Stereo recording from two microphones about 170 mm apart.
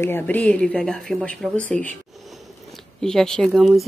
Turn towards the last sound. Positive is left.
turn(degrees=0)  # may be behind; listen again after turning